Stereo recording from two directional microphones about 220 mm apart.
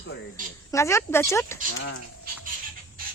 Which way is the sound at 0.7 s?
15° left (ahead or behind).